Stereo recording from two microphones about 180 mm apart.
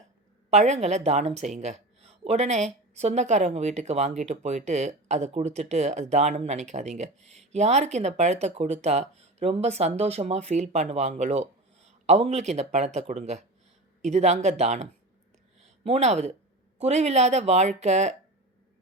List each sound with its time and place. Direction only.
0.5 s a woman's voice: 40° right (ahead or behind)